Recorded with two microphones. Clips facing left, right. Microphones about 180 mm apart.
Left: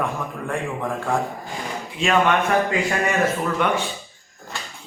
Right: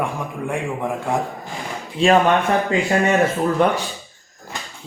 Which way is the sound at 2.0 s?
35° right (ahead or behind).